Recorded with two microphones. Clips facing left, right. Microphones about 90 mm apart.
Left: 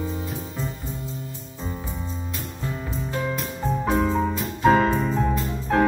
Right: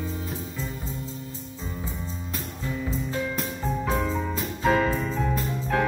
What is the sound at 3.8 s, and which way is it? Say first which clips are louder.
Music: left 6 dB; 30° left (ahead or behind).